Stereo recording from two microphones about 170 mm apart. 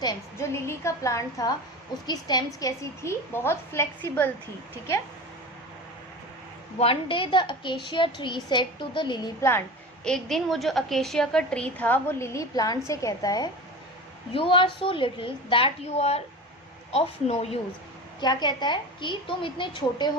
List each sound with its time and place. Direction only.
0.0 s a woman's voice: 20° left (ahead or behind)
6.7 s a woman's voice: 35° left (ahead or behind)
9.5 s a woman's voice: 10° left (ahead or behind); by 17.6 s 35° left (ahead or behind)
18.2 s a woman's voice: 25° left (ahead or behind)